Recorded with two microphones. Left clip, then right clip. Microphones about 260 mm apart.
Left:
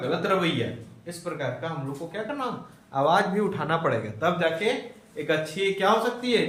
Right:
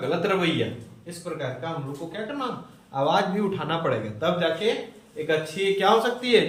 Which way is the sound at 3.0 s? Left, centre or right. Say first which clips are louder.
Left 1 dB; centre.